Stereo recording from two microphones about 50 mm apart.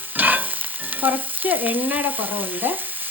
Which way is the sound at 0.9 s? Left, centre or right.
Right.